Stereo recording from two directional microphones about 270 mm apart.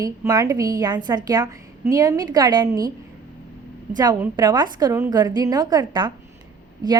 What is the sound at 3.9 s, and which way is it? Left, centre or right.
A woman's voice, centre.